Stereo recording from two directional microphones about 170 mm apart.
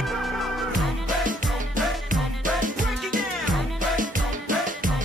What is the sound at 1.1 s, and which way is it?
Music, 50° right (ahead or behind).